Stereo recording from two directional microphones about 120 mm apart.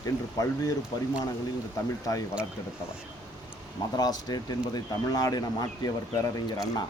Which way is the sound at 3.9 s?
35° left (ahead or behind).